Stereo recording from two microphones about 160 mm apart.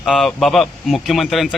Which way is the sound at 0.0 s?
Centre (ahead or behind).